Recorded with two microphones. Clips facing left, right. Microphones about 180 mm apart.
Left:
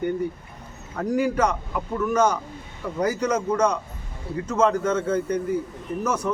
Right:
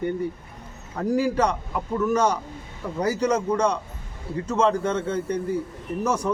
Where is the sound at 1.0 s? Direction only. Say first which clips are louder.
Even; 30° right (ahead or behind).